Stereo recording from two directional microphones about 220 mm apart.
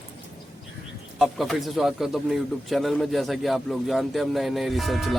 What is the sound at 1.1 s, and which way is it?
Speech, centre (ahead or behind).